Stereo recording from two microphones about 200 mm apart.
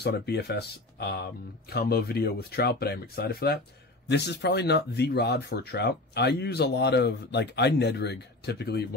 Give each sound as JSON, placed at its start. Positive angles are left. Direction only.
{"t": 0.0, "sound": "speech", "side_deg": 55}